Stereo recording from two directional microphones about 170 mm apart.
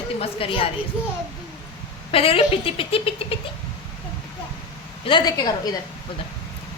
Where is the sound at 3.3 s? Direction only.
30° left (ahead or behind).